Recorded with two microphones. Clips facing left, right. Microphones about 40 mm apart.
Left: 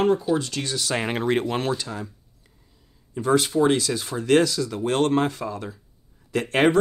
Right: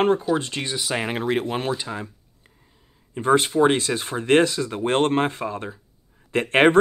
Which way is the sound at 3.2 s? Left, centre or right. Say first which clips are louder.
Right 2 dB; right.